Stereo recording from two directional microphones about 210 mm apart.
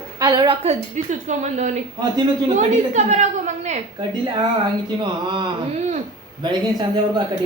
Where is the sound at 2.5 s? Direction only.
35° right (ahead or behind).